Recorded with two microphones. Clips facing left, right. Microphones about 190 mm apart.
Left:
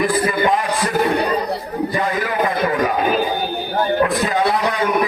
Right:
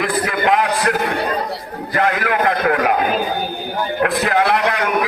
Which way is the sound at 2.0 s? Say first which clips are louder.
Right 5 dB; 75° right (ahead or behind).